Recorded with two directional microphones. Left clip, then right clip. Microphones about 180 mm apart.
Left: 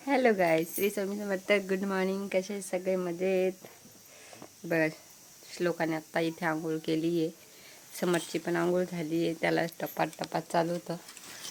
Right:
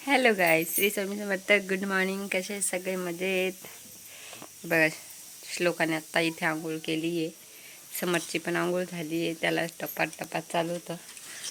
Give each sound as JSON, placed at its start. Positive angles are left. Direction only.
{"t": 0.0, "sound": "speech", "side_deg": 5}
{"t": 4.7, "sound": "speech", "side_deg": -5}
{"t": 6.7, "sound": "a woman's voice", "side_deg": 25}
{"t": 7.9, "sound": "speech", "side_deg": 5}